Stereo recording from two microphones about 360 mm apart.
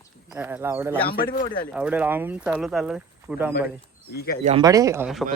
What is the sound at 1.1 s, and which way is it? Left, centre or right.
Speech, left.